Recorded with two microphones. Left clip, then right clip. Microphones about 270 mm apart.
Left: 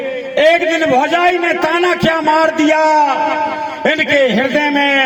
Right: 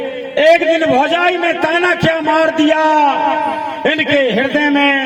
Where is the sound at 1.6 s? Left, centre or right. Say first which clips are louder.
Even; right.